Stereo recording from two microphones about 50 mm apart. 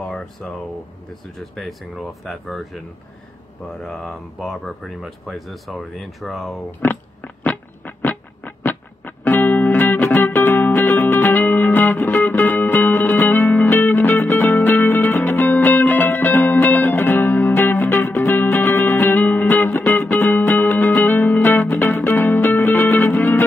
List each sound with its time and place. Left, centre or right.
0.1 s speech: centre
3.8 s speech: centre
6.8 s music: left